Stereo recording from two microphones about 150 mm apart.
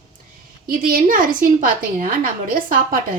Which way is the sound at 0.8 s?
70° right (ahead or behind).